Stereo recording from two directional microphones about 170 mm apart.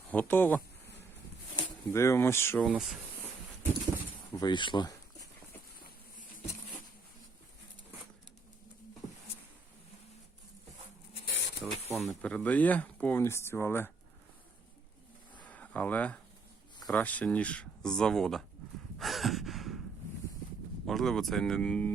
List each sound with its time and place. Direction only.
0.1 s speech: 10° left (ahead or behind)
2.6 s speech: 5° right (ahead or behind)
4.4 s speech: 25° left (ahead or behind)
11.6 s a sound: 5° right (ahead or behind)
11.9 s speech: 5° left (ahead or behind)
15.4 s a sound: 10° left (ahead or behind)
16.8 s speech: 10° left (ahead or behind)
18.9 s sigh: centre (ahead or behind)
20.8 s speech: centre (ahead or behind)